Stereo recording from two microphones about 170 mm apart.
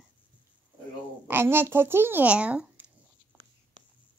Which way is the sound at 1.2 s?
15° right (ahead or behind).